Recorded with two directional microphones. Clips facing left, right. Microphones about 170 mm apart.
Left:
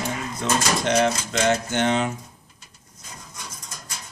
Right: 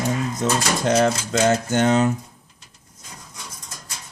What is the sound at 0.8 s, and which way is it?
Speech, 40° right (ahead or behind).